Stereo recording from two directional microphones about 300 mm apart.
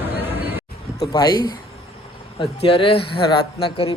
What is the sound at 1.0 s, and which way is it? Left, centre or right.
A man's voice, centre.